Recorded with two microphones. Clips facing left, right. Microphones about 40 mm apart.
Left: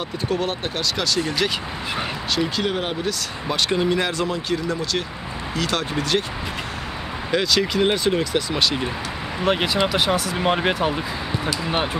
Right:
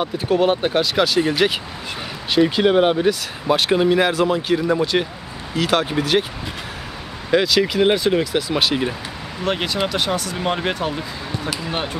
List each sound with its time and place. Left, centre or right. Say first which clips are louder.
0.0 s speech: right 6 dB; centre
7.2 s speech: right 4 dB; centre
9.4 s speech: left 1 dB; centre